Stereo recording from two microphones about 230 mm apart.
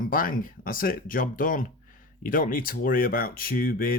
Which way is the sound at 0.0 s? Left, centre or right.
Left.